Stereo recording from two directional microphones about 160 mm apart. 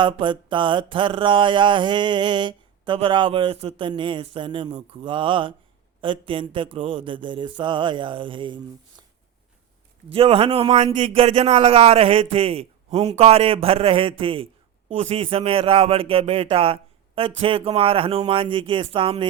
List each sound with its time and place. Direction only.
0.0 s a man's voice: 30° right (ahead or behind)
10.1 s a man's voice: 35° right (ahead or behind)